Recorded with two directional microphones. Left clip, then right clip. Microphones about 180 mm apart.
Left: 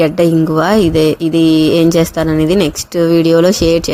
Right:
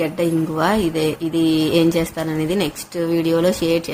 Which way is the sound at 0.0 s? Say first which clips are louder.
Left 9 dB; 40° left (ahead or behind).